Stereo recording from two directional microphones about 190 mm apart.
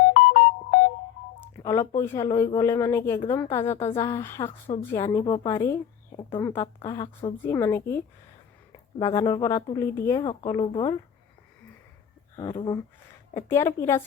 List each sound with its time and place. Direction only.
0.1 s ringtone: 40° left (ahead or behind)
1.5 s a woman's voice: 15° left (ahead or behind)
7.4 s a woman's voice: 15° left (ahead or behind)
12.4 s a woman's voice: 20° left (ahead or behind)